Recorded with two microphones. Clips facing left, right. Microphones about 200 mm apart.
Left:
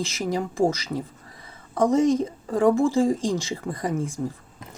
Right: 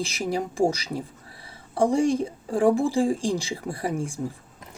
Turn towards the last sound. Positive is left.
turn(degrees=-10)  # may be behind; listen again after turning